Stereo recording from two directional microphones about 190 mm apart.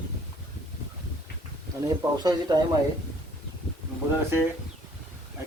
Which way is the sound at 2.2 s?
20° right (ahead or behind).